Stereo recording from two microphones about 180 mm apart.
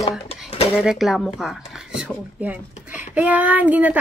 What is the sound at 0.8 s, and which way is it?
Speech, centre (ahead or behind).